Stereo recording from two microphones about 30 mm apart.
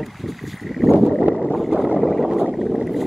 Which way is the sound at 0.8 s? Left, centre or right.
Centre.